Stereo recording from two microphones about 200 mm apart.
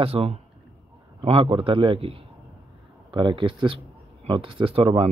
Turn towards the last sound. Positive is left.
turn(degrees=-25)  # may be behind; listen again after turning